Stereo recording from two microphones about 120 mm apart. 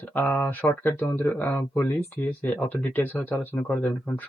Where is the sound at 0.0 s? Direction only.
15° left (ahead or behind).